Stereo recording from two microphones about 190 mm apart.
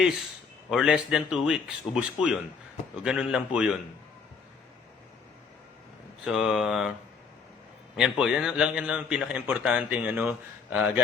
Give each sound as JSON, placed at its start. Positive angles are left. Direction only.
{"t": 0.7, "sound": "a man's voice", "side_deg": -5}
{"t": 6.2, "sound": "a man's voice", "side_deg": -5}
{"t": 7.9, "sound": "a man's voice", "side_deg": -5}